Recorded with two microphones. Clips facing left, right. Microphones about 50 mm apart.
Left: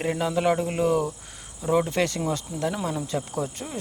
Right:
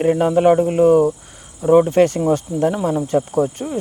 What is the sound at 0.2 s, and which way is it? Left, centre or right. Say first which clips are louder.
Speech: right 8 dB; right.